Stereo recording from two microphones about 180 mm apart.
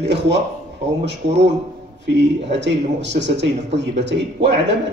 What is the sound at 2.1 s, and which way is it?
A man's voice, 75° right (ahead or behind).